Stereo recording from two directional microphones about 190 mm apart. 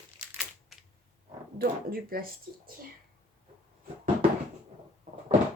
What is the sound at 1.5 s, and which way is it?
Speech, 50° right (ahead or behind).